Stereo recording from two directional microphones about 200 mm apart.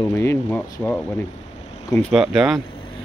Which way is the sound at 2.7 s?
25° left (ahead or behind).